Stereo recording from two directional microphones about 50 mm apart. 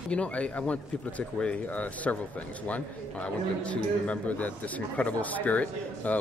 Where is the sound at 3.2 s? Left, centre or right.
Left.